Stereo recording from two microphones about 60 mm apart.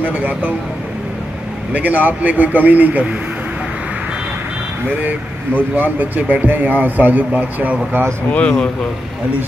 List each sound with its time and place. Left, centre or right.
0.0 s speech: right
1.7 s speech: right
5.0 s speech: right
8.3 s speech: left